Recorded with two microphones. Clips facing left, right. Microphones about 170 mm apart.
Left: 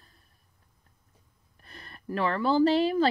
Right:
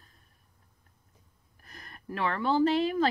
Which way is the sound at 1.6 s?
30° left (ahead or behind).